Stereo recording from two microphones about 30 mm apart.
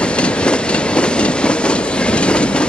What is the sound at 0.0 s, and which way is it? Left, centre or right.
Train, left.